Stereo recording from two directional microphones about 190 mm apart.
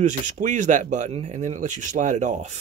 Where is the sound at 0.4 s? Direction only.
40° right (ahead or behind).